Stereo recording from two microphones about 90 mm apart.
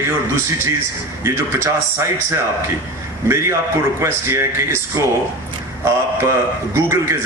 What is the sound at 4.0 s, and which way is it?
Speech, 30° right (ahead or behind).